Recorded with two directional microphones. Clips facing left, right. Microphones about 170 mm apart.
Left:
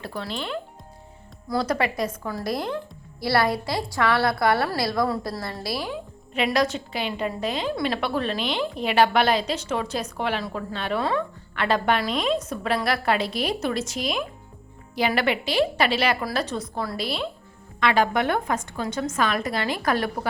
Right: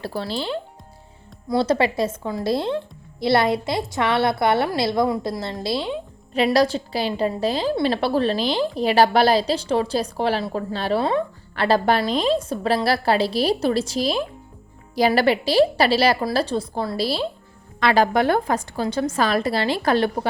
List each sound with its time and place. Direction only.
0.0 s a woman's voice: 35° right (ahead or behind)
6.3 s a woman's voice: 35° right (ahead or behind)